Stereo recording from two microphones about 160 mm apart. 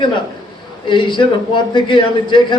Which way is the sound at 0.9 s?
30° left (ahead or behind).